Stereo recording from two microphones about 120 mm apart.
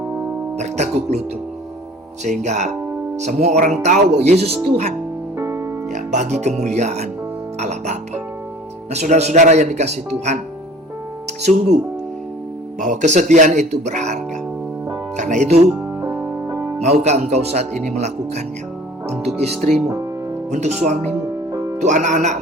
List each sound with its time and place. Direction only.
0.5 s speech: 70° right (ahead or behind)
2.2 s speech: 75° right (ahead or behind)
5.4 s music: 25° right (ahead or behind)
5.9 s speech: 75° right (ahead or behind)
12.8 s speech: 85° right
15.1 s speech: 90° right
16.0 s music: 20° right (ahead or behind)
16.8 s speech: 65° right (ahead or behind)
21.8 s speech: 85° right